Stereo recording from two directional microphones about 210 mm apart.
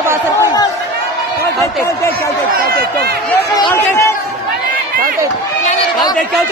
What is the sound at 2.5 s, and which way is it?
Speech, 50° right (ahead or behind).